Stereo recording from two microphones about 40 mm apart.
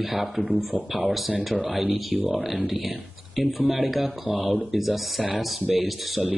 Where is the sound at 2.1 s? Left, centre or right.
Right.